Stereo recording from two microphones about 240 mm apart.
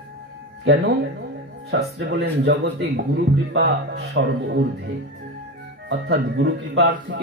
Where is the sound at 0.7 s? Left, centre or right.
Right.